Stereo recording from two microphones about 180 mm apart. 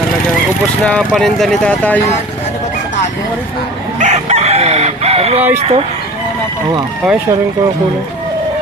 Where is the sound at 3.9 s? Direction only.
40° right (ahead or behind).